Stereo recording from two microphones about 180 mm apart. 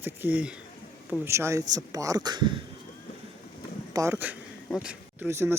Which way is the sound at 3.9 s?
15° right (ahead or behind).